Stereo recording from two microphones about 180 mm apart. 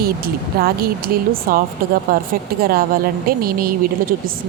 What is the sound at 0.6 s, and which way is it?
Speech, 55° right (ahead or behind).